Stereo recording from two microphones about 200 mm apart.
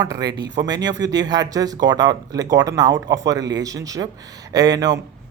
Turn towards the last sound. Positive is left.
turn(degrees=-20)  # may be behind; listen again after turning